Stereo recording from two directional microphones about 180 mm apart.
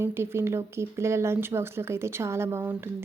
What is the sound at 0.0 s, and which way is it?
Speech, 15° right (ahead or behind).